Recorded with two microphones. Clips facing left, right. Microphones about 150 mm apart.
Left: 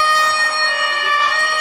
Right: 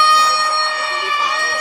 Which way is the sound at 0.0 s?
45° left (ahead or behind).